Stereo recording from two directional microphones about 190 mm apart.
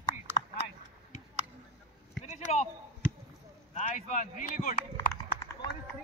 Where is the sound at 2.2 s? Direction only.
35° left (ahead or behind).